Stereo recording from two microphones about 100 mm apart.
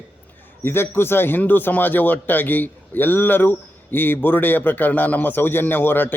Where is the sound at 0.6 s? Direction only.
25° left (ahead or behind).